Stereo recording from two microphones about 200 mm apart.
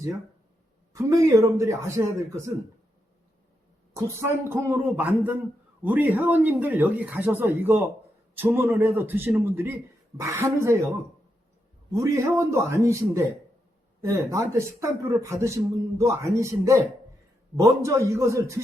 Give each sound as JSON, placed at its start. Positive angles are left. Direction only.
{"t": 0.9, "sound": "speech", "side_deg": -15}
{"t": 3.9, "sound": "speech", "side_deg": -15}
{"t": 11.9, "sound": "speech", "side_deg": -15}